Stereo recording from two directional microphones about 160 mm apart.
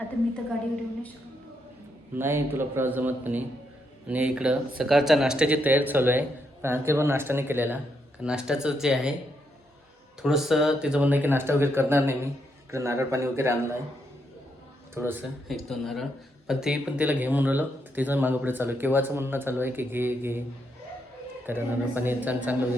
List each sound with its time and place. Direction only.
2.1 s speech: 15° right (ahead or behind)
10.2 s speech: centre (ahead or behind)
14.9 s speech: 10° right (ahead or behind)
15.4 s speech: centre (ahead or behind)
21.4 s speech: 10° right (ahead or behind)